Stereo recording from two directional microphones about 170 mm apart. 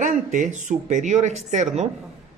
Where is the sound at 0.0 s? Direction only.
50° right (ahead or behind).